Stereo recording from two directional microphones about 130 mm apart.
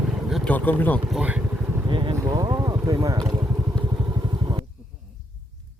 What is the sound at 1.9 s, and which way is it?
Speech, 40° right (ahead or behind).